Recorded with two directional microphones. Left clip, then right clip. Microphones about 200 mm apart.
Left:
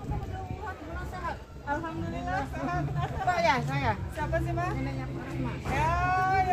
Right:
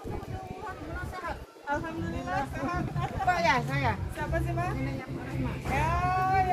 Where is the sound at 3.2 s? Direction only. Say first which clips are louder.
Even; 50° left (ahead or behind).